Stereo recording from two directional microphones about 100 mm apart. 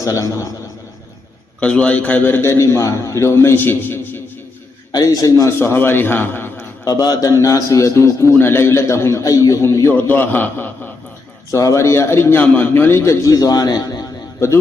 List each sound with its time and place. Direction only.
0.0 s a man's voice: 35° left (ahead or behind)
1.6 s a man's voice: 10° left (ahead or behind)
4.9 s a man's voice: 40° left (ahead or behind)
5.5 s a man's voice: 20° left (ahead or behind)
6.8 s a man's voice: 40° left (ahead or behind)
10.1 s a man's voice: 20° left (ahead or behind)
11.5 s a man's voice: 30° left (ahead or behind)
13.3 s a man's voice: 40° left (ahead or behind)